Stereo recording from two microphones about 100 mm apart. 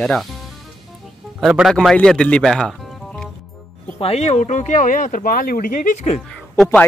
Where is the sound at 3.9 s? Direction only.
90° left.